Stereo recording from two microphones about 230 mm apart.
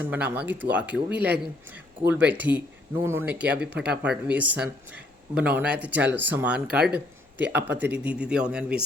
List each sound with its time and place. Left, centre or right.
0.0 s speech: centre